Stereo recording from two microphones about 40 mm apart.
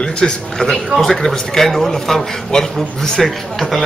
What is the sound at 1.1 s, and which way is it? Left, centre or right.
A man's voice, centre.